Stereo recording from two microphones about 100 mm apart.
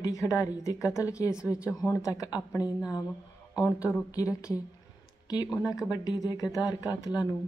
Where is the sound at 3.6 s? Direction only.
15° right (ahead or behind).